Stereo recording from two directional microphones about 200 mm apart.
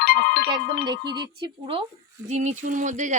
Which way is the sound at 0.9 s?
20° right (ahead or behind).